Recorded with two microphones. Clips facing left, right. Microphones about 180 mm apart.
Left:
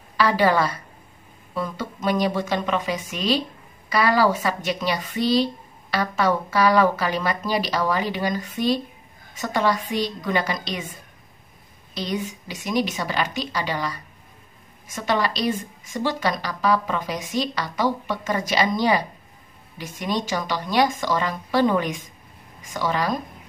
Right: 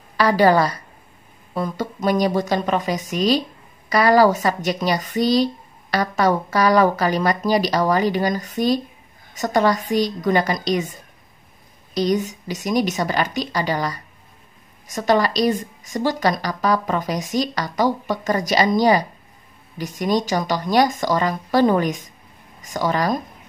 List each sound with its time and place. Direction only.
0.2 s a woman's voice: 40° right (ahead or behind)
11.9 s a woman's voice: 40° right (ahead or behind)